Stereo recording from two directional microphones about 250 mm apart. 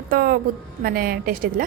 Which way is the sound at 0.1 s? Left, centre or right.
Right.